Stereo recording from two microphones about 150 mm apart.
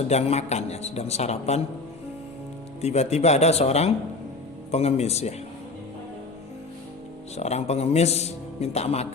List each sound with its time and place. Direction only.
0.1 s a man's voice: 45° left (ahead or behind)
2.8 s a man's voice: 45° left (ahead or behind)
7.3 s a man's voice: 45° left (ahead or behind)